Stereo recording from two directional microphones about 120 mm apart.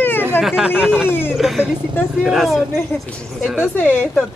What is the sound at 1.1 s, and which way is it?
Speech, 20° left (ahead or behind).